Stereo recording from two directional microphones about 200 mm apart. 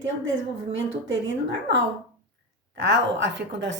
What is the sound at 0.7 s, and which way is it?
A woman's voice, 70° right (ahead or behind).